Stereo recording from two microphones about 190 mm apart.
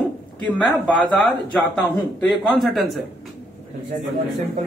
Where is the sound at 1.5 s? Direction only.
5° left (ahead or behind).